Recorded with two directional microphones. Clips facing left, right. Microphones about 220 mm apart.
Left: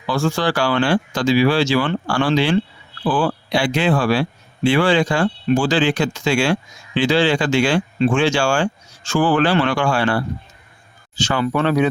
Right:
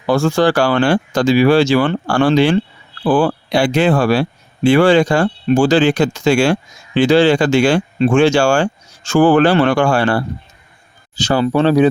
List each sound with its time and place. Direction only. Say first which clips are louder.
0.0 s speech: right 6 dB; 45° right (ahead or behind)